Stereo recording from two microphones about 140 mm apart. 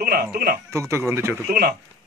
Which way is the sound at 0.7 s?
20° right (ahead or behind).